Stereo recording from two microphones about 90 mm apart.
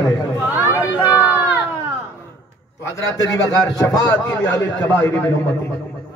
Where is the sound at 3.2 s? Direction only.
45° left (ahead or behind).